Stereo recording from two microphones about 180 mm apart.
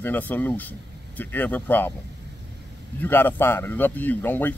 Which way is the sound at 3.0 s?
10° left (ahead or behind).